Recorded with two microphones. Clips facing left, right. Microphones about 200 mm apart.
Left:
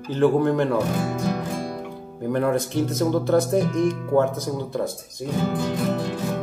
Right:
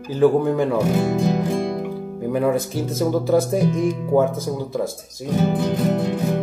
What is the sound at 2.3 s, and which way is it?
Speech, 5° right (ahead or behind).